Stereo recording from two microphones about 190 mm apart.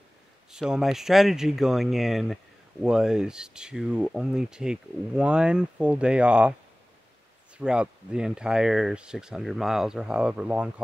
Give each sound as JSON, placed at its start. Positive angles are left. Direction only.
{"t": 0.5, "sound": "speech", "side_deg": -5}
{"t": 7.5, "sound": "speech", "side_deg": -5}